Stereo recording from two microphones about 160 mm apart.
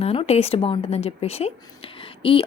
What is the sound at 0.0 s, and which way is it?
Speech, 40° left (ahead or behind).